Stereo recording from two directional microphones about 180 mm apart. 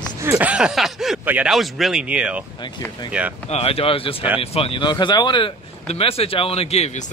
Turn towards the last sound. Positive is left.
turn(degrees=35)  # may be behind; listen again after turning